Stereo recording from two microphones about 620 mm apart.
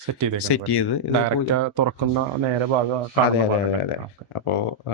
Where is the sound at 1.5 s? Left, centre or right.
Right.